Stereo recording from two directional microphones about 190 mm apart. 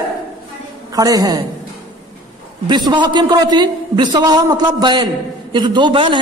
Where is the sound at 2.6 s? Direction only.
25° right (ahead or behind).